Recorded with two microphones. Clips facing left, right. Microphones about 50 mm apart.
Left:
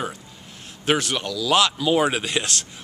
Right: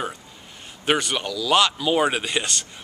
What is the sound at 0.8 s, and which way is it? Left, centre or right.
Speech, centre.